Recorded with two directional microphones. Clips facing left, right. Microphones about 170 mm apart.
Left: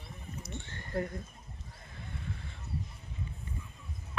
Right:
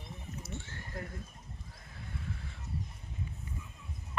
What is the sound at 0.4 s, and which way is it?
Horse, 5° right (ahead or behind).